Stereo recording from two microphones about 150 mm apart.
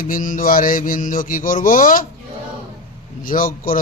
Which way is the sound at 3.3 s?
65° left (ahead or behind).